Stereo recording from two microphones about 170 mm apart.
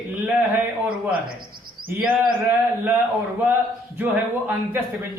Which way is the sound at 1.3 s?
60° right (ahead or behind).